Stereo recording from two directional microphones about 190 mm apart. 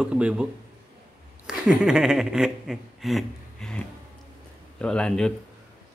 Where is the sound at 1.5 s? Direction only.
5° right (ahead or behind).